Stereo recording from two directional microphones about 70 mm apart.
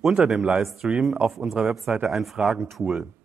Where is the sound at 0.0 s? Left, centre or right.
Centre.